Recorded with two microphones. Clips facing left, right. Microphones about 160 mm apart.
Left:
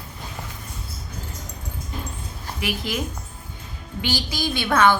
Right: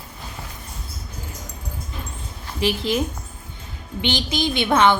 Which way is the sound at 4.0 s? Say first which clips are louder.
Right 3 dB; 20° right (ahead or behind).